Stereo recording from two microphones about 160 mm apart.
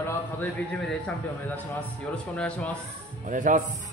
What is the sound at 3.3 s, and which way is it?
Speech, 55° right (ahead or behind).